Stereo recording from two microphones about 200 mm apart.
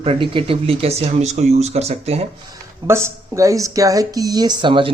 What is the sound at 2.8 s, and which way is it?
Speech, 15° right (ahead or behind).